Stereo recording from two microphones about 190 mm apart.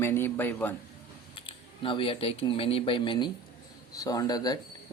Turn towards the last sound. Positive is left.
turn(degrees=20)  # may be behind; listen again after turning